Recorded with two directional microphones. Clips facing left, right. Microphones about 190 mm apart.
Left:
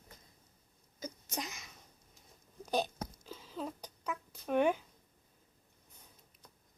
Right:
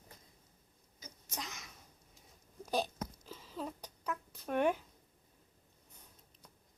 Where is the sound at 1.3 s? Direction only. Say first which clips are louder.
Left 3 dB; 5° left (ahead or behind).